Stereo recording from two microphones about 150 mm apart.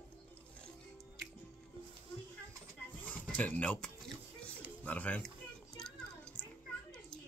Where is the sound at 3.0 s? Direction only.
10° left (ahead or behind).